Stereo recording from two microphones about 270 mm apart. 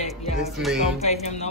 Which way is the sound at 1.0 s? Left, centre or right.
Left.